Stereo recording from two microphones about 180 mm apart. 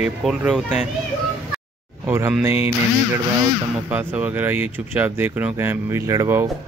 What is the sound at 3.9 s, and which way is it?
Speech, 10° right (ahead or behind).